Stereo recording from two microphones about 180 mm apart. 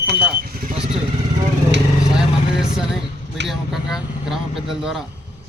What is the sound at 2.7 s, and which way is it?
Speech, centre (ahead or behind).